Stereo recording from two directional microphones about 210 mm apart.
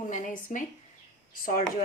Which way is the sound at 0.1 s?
35° left (ahead or behind).